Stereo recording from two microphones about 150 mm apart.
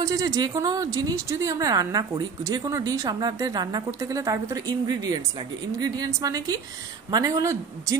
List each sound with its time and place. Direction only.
0.0 s a woman's voice: 20° right (ahead or behind)